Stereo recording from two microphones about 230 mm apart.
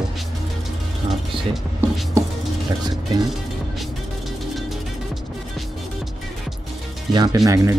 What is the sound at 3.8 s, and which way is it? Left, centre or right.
Music, centre.